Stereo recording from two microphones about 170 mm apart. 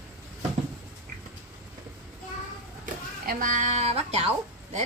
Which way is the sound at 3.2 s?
50° right (ahead or behind).